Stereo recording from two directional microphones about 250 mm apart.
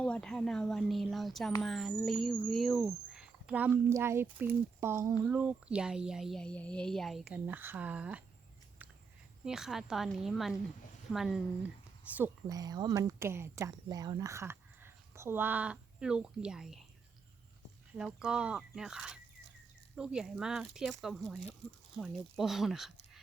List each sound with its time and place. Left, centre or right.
0.0 s speech: centre
9.4 s speech: centre
17.9 s speech: centre